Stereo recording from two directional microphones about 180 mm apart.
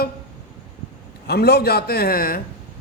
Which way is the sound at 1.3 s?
60° left (ahead or behind).